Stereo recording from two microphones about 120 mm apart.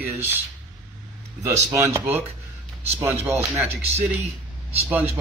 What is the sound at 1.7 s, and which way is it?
Speech, 20° right (ahead or behind).